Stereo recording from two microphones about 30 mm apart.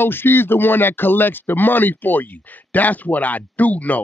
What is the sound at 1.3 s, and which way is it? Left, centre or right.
Speech, left.